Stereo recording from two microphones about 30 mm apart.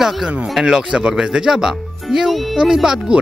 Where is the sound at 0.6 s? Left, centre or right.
Right.